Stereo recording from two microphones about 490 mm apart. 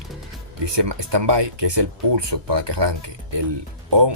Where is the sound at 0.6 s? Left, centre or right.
Right.